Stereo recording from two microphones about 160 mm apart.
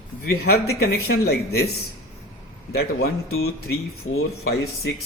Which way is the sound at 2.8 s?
80° left.